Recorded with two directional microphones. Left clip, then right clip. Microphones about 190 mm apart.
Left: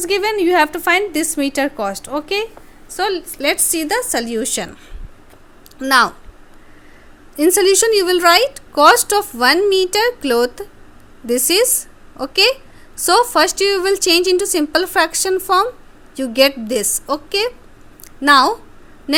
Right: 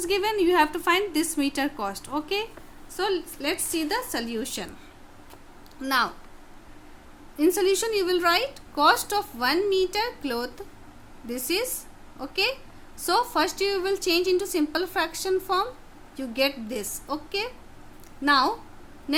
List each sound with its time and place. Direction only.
0.0 s a woman's voice: 30° left (ahead or behind)
5.8 s speech: 40° left (ahead or behind)
7.3 s a woman's voice: 45° left (ahead or behind)